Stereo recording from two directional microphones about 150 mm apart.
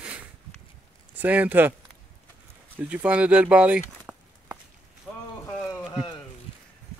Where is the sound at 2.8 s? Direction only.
10° right (ahead or behind).